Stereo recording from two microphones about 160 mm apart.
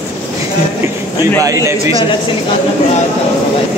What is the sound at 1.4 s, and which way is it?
Speech, 20° right (ahead or behind).